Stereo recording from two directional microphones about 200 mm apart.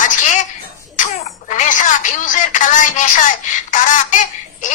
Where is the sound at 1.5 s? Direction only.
40° left (ahead or behind).